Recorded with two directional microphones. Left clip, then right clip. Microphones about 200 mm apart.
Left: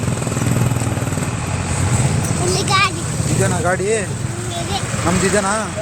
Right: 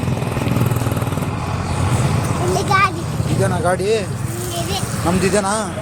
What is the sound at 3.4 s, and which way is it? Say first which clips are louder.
Speech: right 1 dB; 10° right (ahead or behind).